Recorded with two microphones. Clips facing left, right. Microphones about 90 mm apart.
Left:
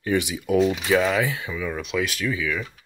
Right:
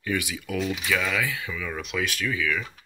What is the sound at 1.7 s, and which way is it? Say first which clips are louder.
Speech: left 3 dB; 5° left (ahead or behind).